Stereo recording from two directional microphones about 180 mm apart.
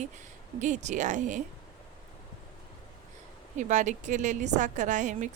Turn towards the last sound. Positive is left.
turn(degrees=-45)  # may be behind; listen again after turning